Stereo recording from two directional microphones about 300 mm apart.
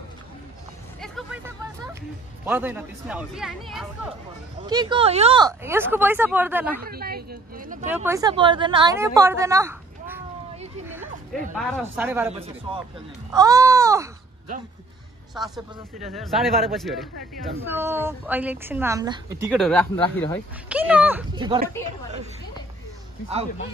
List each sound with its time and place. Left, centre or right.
1.0 s vehicle: centre
2.4 s speech: centre
4.6 s a woman's voice: centre
6.9 s speech: right
7.8 s a woman's voice: centre
11.8 s a woman's voice: centre
12.3 s a man's voice: centre
13.3 s a sound: centre
15.3 s a woman's voice: centre